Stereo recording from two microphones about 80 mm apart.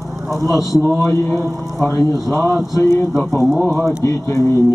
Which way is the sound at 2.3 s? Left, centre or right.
Centre.